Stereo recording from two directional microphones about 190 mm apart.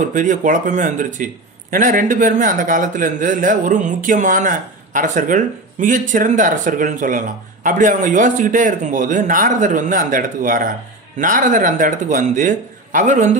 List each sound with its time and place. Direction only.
0.0 s a man's voice: 40° right (ahead or behind)